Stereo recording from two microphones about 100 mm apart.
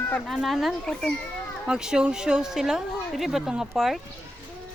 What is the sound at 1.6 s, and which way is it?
Speech, 10° right (ahead or behind).